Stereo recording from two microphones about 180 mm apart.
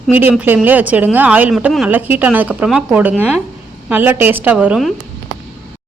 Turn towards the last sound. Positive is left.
turn(degrees=-5)  # may be behind; listen again after turning